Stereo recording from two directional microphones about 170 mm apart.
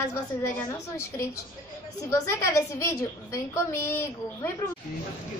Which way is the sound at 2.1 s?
15° left (ahead or behind).